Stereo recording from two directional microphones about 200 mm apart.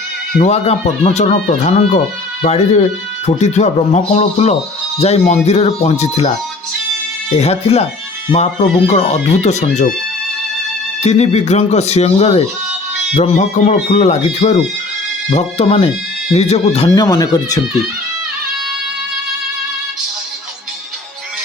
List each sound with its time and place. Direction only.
0.4 s speech: 30° left (ahead or behind)
7.3 s speech: 30° left (ahead or behind)
8.9 s speech: 35° left (ahead or behind)
11.0 s speech: 35° left (ahead or behind)
16.9 s speech: 15° left (ahead or behind)